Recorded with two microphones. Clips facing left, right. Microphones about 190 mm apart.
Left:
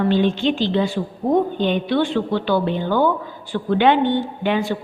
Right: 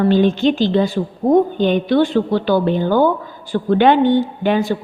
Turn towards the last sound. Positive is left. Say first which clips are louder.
# right 4 dB
turn(degrees=-40)  # may be behind; listen again after turning